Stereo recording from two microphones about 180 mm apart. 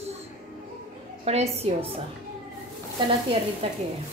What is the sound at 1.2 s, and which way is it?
Speech, 35° right (ahead or behind).